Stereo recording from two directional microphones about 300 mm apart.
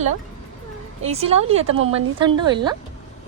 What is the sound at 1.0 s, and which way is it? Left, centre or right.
Speech, right.